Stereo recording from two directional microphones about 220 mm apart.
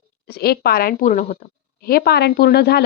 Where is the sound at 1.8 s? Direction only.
45° left (ahead or behind).